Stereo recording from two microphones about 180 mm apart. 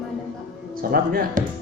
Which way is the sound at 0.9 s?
55° right (ahead or behind).